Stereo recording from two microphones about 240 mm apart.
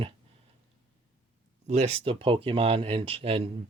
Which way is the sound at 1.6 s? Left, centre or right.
Right.